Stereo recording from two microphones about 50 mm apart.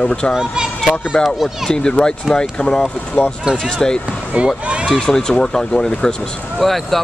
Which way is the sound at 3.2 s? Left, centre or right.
Left.